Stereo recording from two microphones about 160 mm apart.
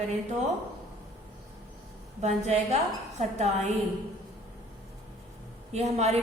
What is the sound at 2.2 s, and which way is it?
A woman's voice, 45° right (ahead or behind).